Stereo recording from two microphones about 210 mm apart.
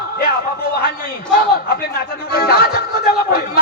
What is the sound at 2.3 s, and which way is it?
Music, 45° left (ahead or behind).